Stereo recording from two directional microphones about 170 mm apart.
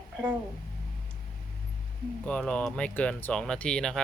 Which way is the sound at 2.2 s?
5° left (ahead or behind).